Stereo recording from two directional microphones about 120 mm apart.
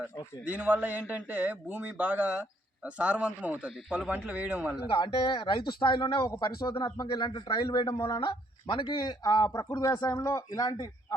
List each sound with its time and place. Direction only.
0.4 s a man's voice: 15° right (ahead or behind)
4.9 s a man's voice: 40° left (ahead or behind)